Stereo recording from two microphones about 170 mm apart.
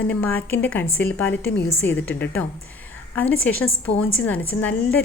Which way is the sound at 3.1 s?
10° left (ahead or behind).